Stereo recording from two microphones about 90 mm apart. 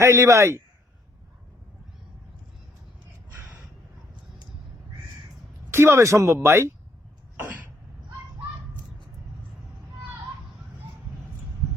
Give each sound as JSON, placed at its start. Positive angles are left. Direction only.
{"t": 0.0, "sound": "speech", "side_deg": -35}
{"t": 5.7, "sound": "speech", "side_deg": -30}
{"t": 7.3, "sound": "cough", "side_deg": -25}